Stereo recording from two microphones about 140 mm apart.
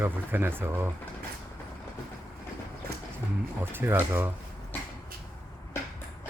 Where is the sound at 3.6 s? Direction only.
15° right (ahead or behind).